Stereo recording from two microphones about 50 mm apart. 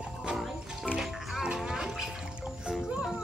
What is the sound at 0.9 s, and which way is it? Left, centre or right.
Music, centre.